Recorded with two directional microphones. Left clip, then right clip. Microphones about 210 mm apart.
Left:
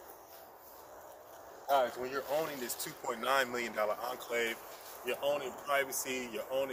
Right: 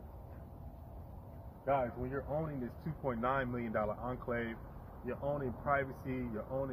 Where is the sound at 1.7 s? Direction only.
10° left (ahead or behind).